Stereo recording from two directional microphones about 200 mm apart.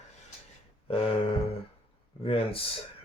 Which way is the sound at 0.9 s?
30° left (ahead or behind).